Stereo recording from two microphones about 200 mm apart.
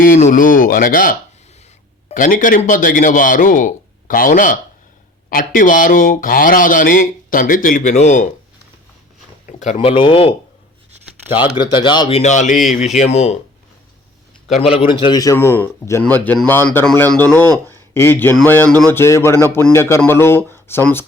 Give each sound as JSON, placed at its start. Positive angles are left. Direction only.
{"t": 0.0, "sound": "speech", "side_deg": 40}
{"t": 9.5, "sound": "speech", "side_deg": 35}
{"t": 11.3, "sound": "speech", "side_deg": 25}
{"t": 14.5, "sound": "a man's voice", "side_deg": 30}